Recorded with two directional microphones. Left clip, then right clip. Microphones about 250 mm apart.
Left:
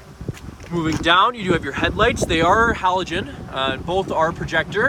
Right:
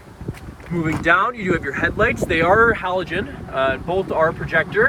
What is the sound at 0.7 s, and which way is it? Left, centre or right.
Speech, centre.